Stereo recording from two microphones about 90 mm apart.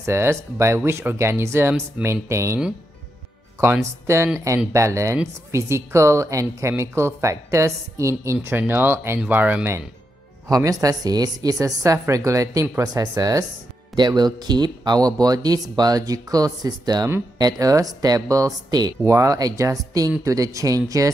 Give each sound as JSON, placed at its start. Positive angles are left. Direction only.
{"t": 0.0, "sound": "a woman's voice", "side_deg": -30}
{"t": 3.6, "sound": "a woman's voice", "side_deg": -30}
{"t": 10.5, "sound": "a woman's voice", "side_deg": -40}